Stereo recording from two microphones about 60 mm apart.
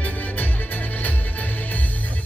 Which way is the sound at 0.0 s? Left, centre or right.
Left.